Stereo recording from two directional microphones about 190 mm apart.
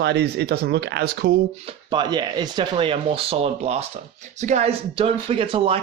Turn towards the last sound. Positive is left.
turn(degrees=-30)  # may be behind; listen again after turning